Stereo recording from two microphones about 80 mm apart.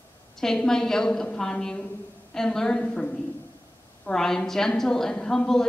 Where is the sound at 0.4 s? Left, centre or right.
Centre.